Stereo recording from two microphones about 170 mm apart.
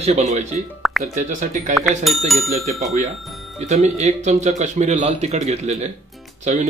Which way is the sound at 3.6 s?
40° right (ahead or behind).